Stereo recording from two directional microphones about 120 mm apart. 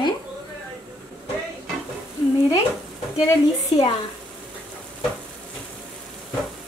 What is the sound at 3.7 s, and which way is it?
Speech, 55° left (ahead or behind).